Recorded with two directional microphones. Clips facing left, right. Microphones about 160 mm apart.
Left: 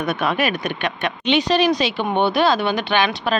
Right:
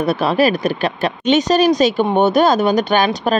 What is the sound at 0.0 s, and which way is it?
A woman's voice, 35° right (ahead or behind).